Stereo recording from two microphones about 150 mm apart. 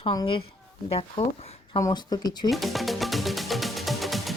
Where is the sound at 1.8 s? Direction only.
25° left (ahead or behind).